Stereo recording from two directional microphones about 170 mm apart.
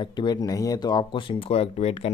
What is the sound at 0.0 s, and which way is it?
Speech, 25° left (ahead or behind).